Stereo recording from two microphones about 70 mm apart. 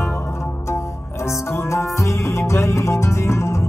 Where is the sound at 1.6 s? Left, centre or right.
Left.